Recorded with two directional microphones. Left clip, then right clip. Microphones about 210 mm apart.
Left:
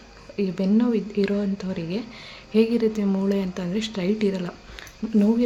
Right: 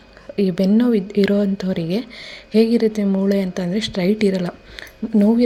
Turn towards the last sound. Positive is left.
turn(degrees=-25)  # may be behind; listen again after turning